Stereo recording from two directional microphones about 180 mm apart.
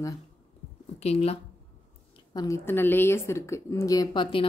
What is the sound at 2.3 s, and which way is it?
A woman's voice, 20° left (ahead or behind).